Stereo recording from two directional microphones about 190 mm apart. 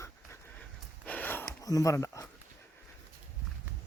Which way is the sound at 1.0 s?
10° left (ahead or behind).